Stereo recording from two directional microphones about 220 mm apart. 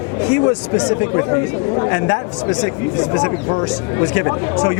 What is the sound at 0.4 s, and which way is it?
Speech, 25° left (ahead or behind).